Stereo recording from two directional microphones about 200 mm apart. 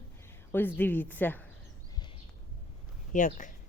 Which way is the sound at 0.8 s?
10° left (ahead or behind).